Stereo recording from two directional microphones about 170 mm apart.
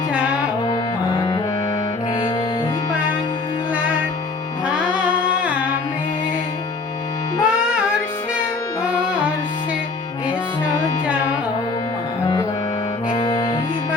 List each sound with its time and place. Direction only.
0.1 s music: 5° right (ahead or behind)
4.6 s music: 10° right (ahead or behind)
7.4 s music: 5° right (ahead or behind)
13.1 s music: 25° left (ahead or behind)